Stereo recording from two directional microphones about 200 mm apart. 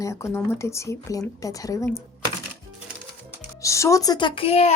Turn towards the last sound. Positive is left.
turn(degrees=30)  # may be behind; listen again after turning